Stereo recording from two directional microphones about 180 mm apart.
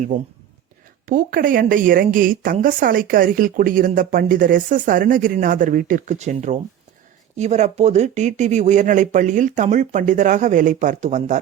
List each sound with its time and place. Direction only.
0.1 s a woman's voice: 45° right (ahead or behind)